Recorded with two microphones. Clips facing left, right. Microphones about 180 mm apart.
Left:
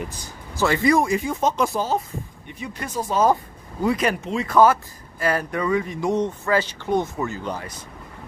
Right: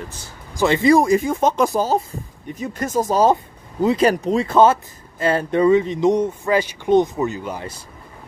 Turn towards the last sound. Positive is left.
turn(degrees=-20)  # may be behind; listen again after turning